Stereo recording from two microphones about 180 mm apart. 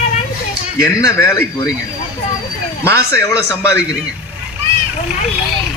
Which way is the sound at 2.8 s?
15° left (ahead or behind).